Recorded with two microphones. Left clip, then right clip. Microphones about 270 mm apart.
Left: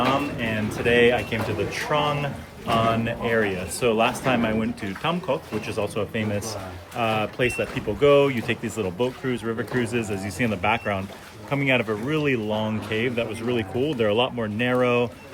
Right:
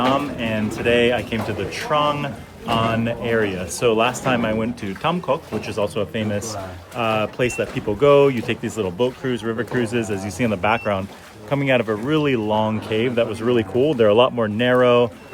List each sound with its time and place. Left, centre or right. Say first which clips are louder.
0.3 s speech: right 3 dB; centre